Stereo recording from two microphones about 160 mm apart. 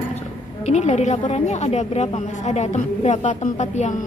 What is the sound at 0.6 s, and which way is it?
A woman's voice, 45° left (ahead or behind).